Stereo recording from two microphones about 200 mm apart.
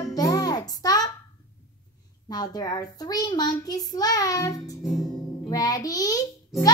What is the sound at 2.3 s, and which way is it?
A child's voice, 20° left (ahead or behind).